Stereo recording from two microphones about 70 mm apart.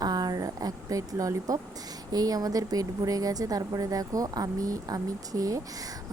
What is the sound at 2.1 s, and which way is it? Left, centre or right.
Speech, right.